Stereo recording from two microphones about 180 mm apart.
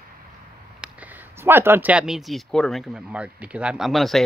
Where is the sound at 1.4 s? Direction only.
10° right (ahead or behind).